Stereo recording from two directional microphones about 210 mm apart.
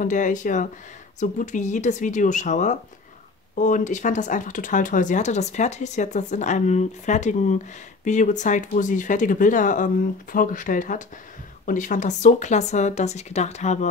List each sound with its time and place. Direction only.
0.0 s speech: 35° left (ahead or behind)